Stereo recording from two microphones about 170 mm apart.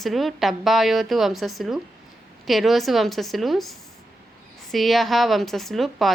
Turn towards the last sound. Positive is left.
turn(degrees=0)  # may be behind; listen again after turning